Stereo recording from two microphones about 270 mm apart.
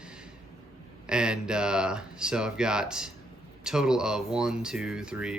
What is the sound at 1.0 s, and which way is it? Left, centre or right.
Speech, centre.